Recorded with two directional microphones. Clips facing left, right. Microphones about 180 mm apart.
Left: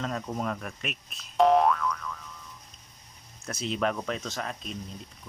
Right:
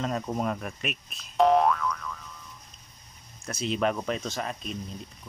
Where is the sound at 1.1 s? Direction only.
Centre (ahead or behind).